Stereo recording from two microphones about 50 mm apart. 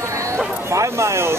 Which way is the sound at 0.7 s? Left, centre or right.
Right.